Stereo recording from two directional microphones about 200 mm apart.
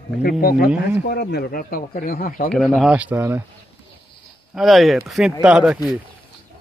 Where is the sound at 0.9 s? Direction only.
55° left (ahead or behind).